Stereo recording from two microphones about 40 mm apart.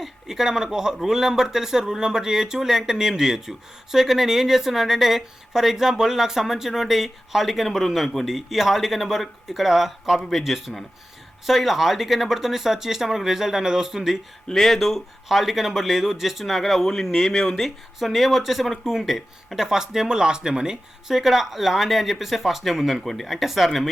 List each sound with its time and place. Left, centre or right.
0.0 s speech: centre
14.4 s speech: centre
19.6 s speech: centre